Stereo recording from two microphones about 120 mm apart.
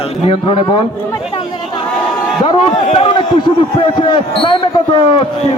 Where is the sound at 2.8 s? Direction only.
70° left (ahead or behind).